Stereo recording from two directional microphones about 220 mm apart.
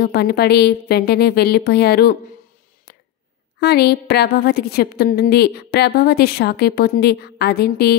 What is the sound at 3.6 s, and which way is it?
A woman's voice, 45° left (ahead or behind).